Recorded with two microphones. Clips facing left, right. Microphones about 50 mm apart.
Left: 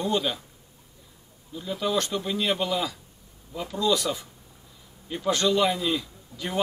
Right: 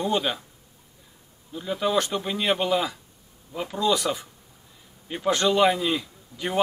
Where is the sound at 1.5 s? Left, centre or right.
Centre.